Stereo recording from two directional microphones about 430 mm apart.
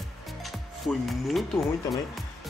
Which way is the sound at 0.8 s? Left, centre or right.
Centre.